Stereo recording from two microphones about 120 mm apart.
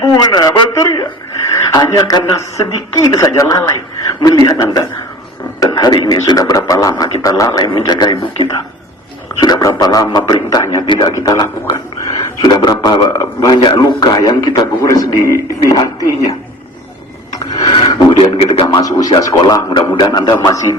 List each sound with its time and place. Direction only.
0.0 s a sound: 35° left (ahead or behind)
1.5 s radio: 35° left (ahead or behind)
1.9 s a man's voice: 30° left (ahead or behind)
9.4 s a sound: 35° left (ahead or behind)
9.8 s a man's voice: 30° left (ahead or behind)
10.8 s a man's voice: 40° left (ahead or behind)
11.2 s a man's voice: 30° left (ahead or behind)
17.7 s a man's voice: 45° left (ahead or behind)
18.7 s speech: 30° left (ahead or behind)